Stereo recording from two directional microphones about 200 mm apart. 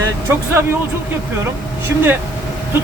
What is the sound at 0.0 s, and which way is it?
Speech, 10° right (ahead or behind).